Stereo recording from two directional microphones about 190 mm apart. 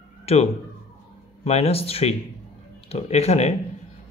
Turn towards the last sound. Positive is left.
turn(degrees=35)  # may be behind; listen again after turning